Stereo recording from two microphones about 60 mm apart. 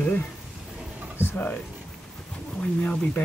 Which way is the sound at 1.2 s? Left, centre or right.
Left.